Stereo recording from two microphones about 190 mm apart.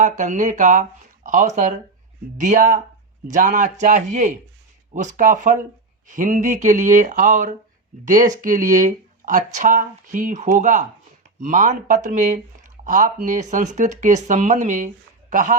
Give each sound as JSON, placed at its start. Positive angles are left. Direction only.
{"t": 0.0, "sound": "speech", "side_deg": -40}